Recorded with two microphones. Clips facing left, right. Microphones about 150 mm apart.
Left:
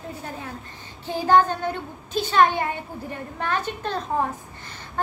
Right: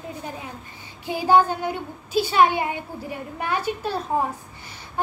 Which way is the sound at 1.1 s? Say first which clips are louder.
Even; 10° right (ahead or behind).